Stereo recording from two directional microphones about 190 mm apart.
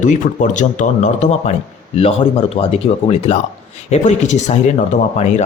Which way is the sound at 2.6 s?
30° left (ahead or behind).